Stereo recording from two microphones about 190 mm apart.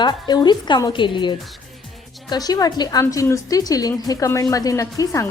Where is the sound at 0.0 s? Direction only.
25° left (ahead or behind).